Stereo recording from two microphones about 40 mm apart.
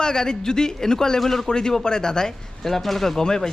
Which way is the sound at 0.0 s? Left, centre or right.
Centre.